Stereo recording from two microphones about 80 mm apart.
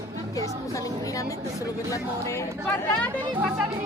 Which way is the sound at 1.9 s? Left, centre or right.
Left.